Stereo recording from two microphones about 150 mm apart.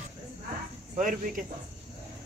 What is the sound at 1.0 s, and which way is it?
Speech, 60° right (ahead or behind).